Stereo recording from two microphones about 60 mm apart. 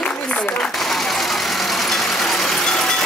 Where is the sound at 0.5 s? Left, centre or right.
Centre.